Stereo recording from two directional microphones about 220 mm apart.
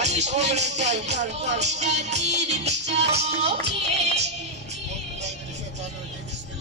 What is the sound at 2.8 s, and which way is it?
Music, 50° right (ahead or behind).